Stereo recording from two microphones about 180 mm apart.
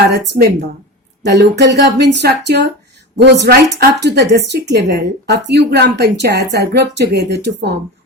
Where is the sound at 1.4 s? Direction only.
70° right (ahead or behind).